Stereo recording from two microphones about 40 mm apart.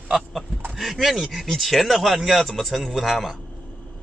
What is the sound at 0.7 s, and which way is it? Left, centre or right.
Speech, centre.